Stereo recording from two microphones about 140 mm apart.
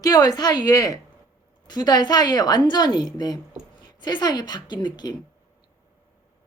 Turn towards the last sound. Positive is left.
turn(degrees=30)  # may be behind; listen again after turning